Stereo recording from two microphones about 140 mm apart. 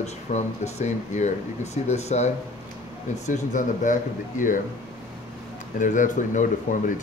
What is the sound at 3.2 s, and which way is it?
Speech, 65° left (ahead or behind).